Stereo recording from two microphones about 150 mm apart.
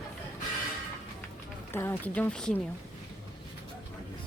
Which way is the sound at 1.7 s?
15° left (ahead or behind).